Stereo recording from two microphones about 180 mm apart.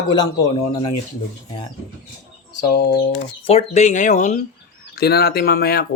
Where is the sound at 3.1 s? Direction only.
35° left (ahead or behind).